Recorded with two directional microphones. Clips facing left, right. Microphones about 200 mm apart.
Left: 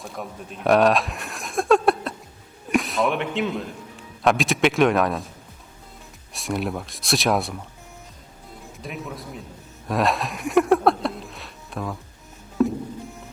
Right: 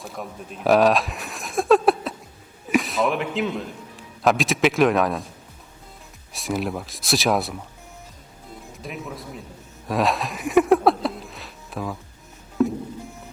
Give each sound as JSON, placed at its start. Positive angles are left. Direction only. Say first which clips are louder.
{"t": 0.0, "sound": "a man's voice", "louder": "even", "side_deg": 0}
{"t": 6.3, "sound": "speech", "louder": "even", "side_deg": 0}
{"t": 8.8, "sound": "speech", "louder": "even", "side_deg": 0}
{"t": 9.9, "sound": "music", "louder": "even", "side_deg": 0}